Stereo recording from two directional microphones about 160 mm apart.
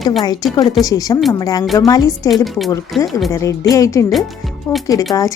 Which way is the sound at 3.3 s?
20° left (ahead or behind).